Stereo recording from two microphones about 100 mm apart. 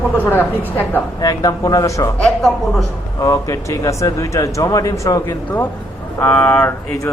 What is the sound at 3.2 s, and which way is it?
A man's voice, 30° left (ahead or behind).